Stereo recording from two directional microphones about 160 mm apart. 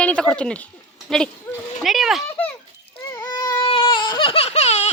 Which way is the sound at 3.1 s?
20° left (ahead or behind).